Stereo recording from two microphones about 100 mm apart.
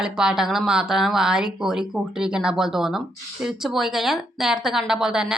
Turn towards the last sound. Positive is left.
turn(degrees=-5)  # may be behind; listen again after turning